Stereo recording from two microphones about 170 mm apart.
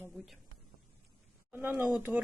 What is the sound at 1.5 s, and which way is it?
Speech, 10° right (ahead or behind).